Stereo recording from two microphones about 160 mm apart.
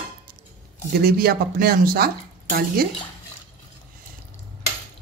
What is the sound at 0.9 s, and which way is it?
Speech, 70° right (ahead or behind).